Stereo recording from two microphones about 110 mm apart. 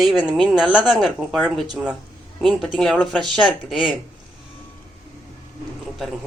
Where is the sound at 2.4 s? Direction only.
Centre (ahead or behind).